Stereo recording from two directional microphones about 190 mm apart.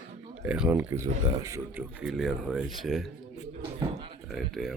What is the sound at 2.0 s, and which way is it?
Speech, centre (ahead or behind).